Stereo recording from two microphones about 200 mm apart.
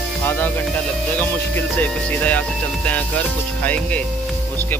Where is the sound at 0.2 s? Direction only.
10° left (ahead or behind).